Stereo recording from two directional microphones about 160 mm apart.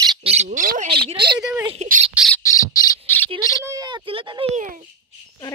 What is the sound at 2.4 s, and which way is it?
Squawk, 20° left (ahead or behind).